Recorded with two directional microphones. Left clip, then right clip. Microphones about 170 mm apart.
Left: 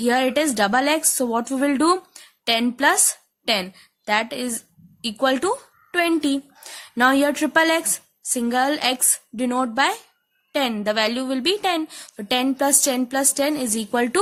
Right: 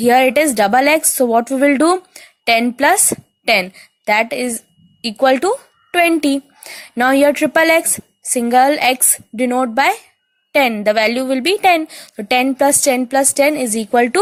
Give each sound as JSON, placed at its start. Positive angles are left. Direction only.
{"t": 0.0, "sound": "a woman's voice", "side_deg": -25}